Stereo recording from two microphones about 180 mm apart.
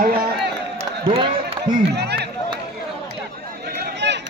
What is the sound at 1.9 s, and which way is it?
Speech, 65° right (ahead or behind).